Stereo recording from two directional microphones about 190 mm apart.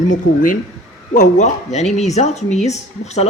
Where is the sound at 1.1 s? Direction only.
40° left (ahead or behind).